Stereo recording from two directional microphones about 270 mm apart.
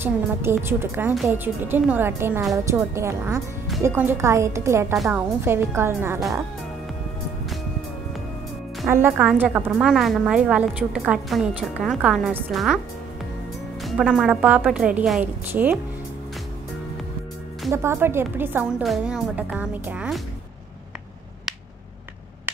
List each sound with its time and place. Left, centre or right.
0.0 s a woman's voice: centre
8.8 s a woman's voice: centre
13.8 s a woman's voice: centre
17.6 s a woman's voice: centre